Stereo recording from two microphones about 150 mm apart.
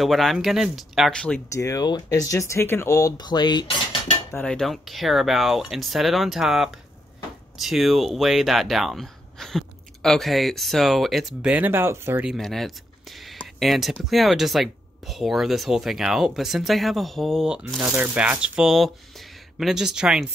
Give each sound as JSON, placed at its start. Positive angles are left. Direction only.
{"t": 0.0, "sound": "speech", "side_deg": 0}
{"t": 1.5, "sound": "speech", "side_deg": 20}
{"t": 4.5, "sound": "speech", "side_deg": 0}
{"t": 12.3, "sound": "speech", "side_deg": 0}
{"t": 13.2, "sound": "a sound", "side_deg": 0}
{"t": 14.0, "sound": "speech", "side_deg": 0}